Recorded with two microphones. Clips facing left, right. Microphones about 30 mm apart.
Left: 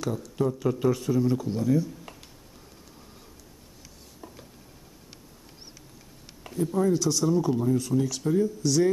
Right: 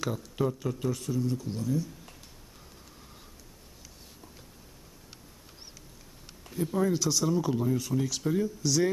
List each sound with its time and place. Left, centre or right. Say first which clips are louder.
0.0 s speech: left 2 dB; centre
0.5 s speech: left 7 dB; centre
1.5 s speech: left 6 dB; centre
6.5 s speech: left 3 dB; centre